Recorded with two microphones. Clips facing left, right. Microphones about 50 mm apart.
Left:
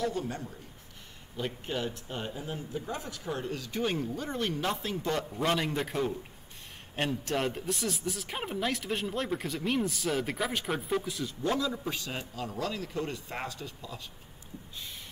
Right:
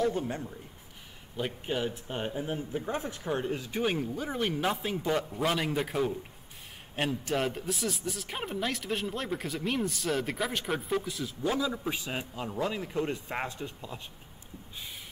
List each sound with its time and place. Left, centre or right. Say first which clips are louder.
0.0 s speech: right 3 dB; right
1.3 s speech: right 2 dB; centre; by 14.0 s right